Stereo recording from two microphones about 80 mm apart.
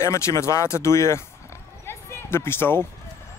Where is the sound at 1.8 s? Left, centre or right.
Left.